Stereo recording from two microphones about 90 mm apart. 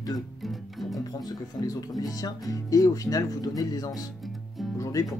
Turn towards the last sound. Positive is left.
turn(degrees=35)  # may be behind; listen again after turning